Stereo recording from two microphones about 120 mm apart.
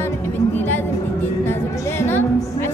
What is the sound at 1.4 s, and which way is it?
Music, 20° left (ahead or behind).